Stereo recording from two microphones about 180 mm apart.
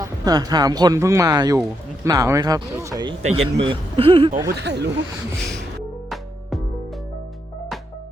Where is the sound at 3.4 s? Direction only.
30° right (ahead or behind).